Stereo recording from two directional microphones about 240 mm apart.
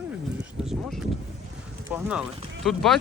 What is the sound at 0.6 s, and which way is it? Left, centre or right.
Speech, centre.